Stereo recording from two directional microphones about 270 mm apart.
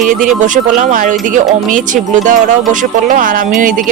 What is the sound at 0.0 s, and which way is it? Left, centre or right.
Speech, right.